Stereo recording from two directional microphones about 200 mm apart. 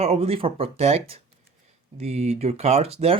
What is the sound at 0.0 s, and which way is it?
Speech, 30° right (ahead or behind).